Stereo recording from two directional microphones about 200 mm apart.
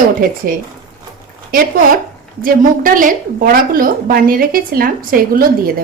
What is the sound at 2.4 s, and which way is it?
A woman's voice, 40° right (ahead or behind).